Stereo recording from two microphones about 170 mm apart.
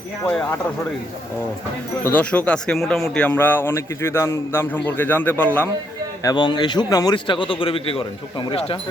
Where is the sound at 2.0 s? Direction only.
10° left (ahead or behind).